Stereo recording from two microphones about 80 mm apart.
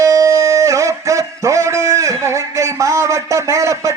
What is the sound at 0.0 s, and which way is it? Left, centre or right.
A man's voice, right.